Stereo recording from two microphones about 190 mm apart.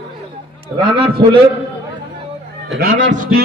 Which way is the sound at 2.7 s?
65° right (ahead or behind).